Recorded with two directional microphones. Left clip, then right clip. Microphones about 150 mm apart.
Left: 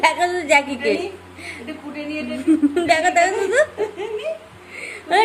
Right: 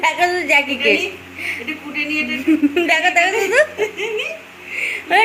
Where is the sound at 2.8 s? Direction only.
Centre (ahead or behind).